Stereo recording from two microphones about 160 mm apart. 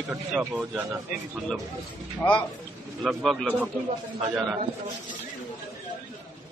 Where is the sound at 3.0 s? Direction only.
Centre (ahead or behind).